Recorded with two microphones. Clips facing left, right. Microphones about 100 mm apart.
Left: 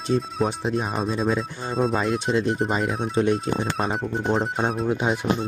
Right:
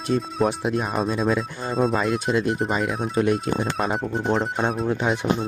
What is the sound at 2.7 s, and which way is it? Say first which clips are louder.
Speech: even; 35° left (ahead or behind).